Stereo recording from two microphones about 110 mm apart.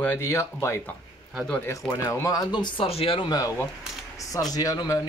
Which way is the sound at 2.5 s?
40° left (ahead or behind).